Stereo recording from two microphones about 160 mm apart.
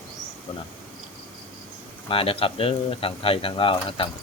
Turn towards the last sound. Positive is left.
turn(degrees=35)  # may be behind; listen again after turning